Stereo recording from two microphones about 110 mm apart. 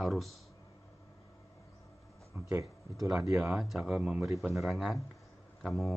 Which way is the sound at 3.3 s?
10° right (ahead or behind).